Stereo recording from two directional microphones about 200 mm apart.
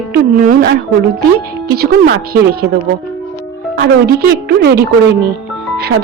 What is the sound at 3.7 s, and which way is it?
A woman's voice, 50° right (ahead or behind).